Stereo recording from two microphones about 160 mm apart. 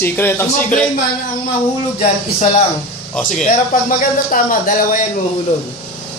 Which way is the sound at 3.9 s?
60° left (ahead or behind).